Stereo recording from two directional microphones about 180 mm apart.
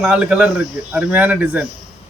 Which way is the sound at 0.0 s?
5° right (ahead or behind).